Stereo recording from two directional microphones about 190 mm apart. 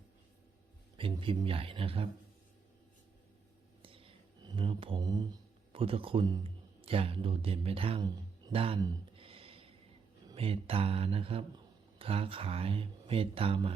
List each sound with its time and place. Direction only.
0.9 s speech: 25° right (ahead or behind)
3.8 s whispering: 30° right (ahead or behind)
5.7 s speech: 30° right (ahead or behind)
8.5 s a sound: 30° right (ahead or behind)
10.2 s speech: 30° right (ahead or behind)